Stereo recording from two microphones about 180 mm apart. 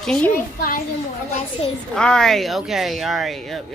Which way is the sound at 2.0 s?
5° left (ahead or behind).